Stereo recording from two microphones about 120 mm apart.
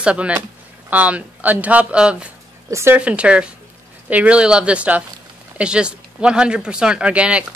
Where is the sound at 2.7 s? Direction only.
25° right (ahead or behind).